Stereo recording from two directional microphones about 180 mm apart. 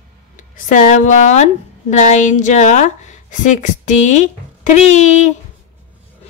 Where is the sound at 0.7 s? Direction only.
45° left (ahead or behind).